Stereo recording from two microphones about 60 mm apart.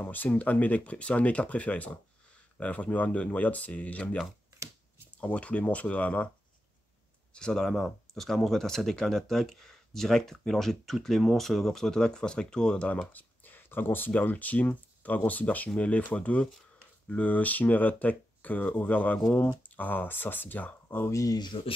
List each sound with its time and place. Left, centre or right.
0.0 s speech: left
5.2 s speech: left
7.3 s speech: centre; by 21.0 s left
21.1 s speech: left